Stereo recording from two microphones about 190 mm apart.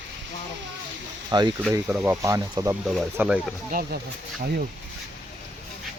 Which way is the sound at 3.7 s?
50° right (ahead or behind).